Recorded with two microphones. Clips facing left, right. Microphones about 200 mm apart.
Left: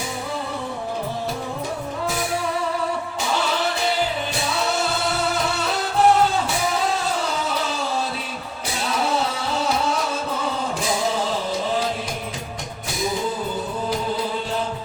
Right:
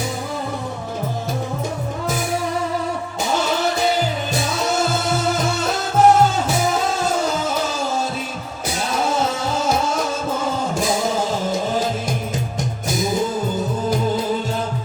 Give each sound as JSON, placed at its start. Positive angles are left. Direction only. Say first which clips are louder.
{"t": 4.7, "sound": "music", "louder": "right 3 dB", "side_deg": -45}
{"t": 9.0, "sound": "music", "louder": "right 3 dB", "side_deg": -45}